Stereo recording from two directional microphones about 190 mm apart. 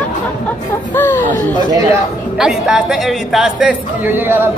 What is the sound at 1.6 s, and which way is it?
Speech, 20° right (ahead or behind).